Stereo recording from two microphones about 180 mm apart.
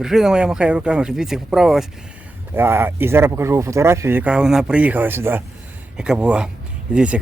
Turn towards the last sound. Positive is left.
turn(degrees=-5)  # may be behind; listen again after turning